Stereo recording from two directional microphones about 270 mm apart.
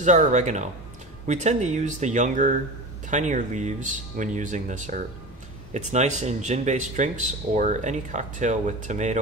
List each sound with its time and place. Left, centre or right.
0.0 s speech: right